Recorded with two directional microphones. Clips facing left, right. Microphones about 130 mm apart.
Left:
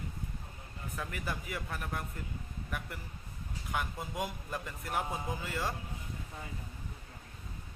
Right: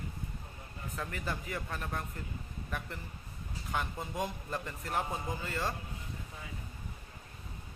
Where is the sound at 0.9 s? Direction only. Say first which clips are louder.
Right 1 dB; 10° left (ahead or behind).